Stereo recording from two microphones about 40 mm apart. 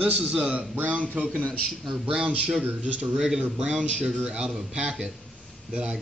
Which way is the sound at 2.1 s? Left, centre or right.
Centre.